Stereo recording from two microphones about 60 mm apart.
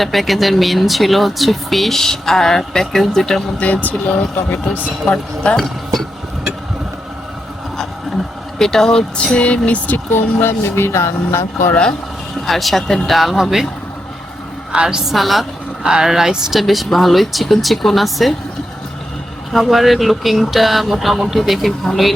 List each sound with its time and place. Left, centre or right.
0.0 s speech: centre
3.6 s speech: left
5.5 s speech: centre
8.5 s speech: centre; by 11.8 s left
12.5 s speech: centre
14.7 s a woman's voice: centre
15.1 s speech: centre
19.5 s speech: centre